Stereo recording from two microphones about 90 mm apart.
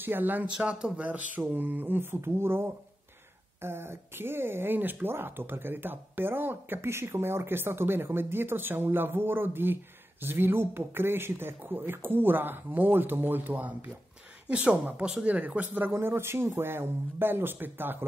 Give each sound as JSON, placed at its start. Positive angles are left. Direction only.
{"t": 0.0, "sound": "speech", "side_deg": -20}
{"t": 0.6, "sound": "speech", "side_deg": -10}